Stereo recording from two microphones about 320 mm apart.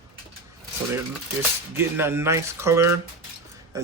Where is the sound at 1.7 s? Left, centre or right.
Centre.